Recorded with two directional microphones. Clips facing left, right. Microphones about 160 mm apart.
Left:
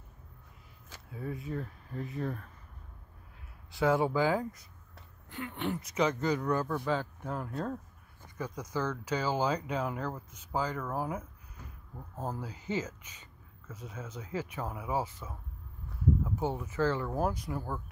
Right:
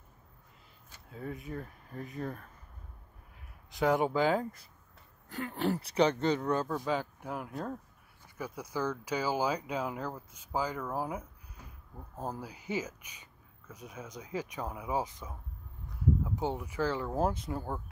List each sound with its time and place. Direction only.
0.9 s a sound: 90° left
2.1 s speech: 35° right (ahead or behind)
3.7 s speech: 20° right (ahead or behind)
5.3 s speech: 40° right (ahead or behind)